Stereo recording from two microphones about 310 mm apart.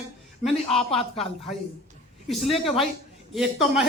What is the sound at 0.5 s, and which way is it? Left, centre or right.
Speech, centre.